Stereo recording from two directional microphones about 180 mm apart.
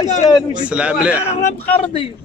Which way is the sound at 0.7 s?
5° right (ahead or behind).